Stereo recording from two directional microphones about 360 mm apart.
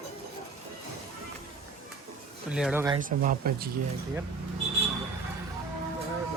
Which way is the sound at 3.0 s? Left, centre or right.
Right.